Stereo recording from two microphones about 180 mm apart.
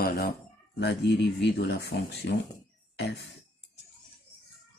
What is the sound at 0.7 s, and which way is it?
Speech, 70° left (ahead or behind).